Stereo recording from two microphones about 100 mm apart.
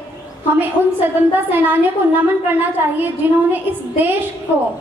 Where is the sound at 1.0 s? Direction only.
20° right (ahead or behind).